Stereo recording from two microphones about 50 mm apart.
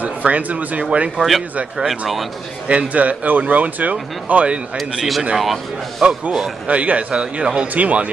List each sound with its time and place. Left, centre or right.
0.0 s speech: right
1.8 s speech: centre
2.7 s speech: right
4.7 s speech: centre
6.7 s speech: right